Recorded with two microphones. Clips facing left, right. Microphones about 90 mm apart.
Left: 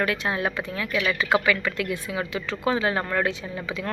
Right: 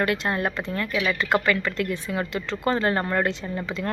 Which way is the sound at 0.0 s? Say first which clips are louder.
Right 1 dB; centre (ahead or behind).